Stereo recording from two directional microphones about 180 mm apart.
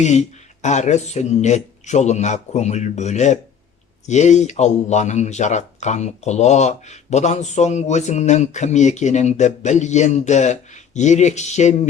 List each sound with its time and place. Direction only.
0.0 s speech: 40° left (ahead or behind)